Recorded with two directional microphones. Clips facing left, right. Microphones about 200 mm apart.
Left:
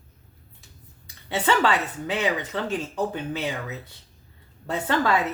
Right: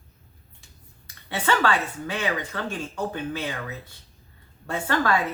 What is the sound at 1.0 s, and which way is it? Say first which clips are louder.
Speech: left 2 dB; 20° left (ahead or behind).